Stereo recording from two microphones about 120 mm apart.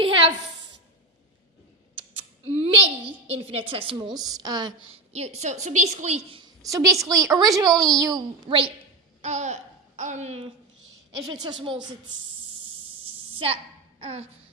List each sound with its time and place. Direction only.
2.4 s a sound: 55° right (ahead or behind)
3.2 s a woman's voice: 55° right (ahead or behind)
4.1 s a woman's voice: 35° right (ahead or behind)
5.1 s a woman's voice: 65° right (ahead or behind)
6.6 s a woman's voice: 30° right (ahead or behind)
8.4 s a woman's voice: 45° right (ahead or behind)
9.2 s speech: 75° right (ahead or behind)
11.2 s a woman's voice: 35° right (ahead or behind)
13.3 s a woman's voice: 55° right (ahead or behind)
14.0 s music: 60° right (ahead or behind)